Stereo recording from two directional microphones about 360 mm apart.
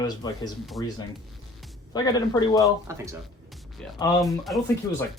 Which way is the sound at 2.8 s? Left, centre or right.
Centre.